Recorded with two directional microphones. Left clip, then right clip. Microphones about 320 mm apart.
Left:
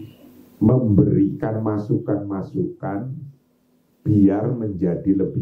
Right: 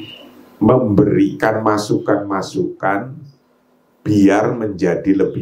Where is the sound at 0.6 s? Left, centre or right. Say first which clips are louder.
Right 6 dB; centre.